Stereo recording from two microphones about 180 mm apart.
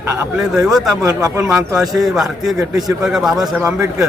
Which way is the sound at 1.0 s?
20° right (ahead or behind).